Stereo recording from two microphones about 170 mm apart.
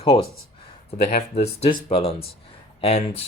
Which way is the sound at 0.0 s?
35° left (ahead or behind).